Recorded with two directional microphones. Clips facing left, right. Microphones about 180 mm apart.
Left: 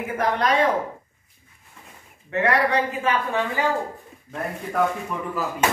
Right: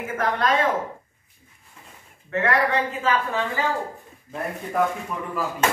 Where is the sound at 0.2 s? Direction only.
15° left (ahead or behind).